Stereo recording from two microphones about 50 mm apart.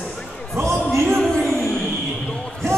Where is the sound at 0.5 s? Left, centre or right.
Right.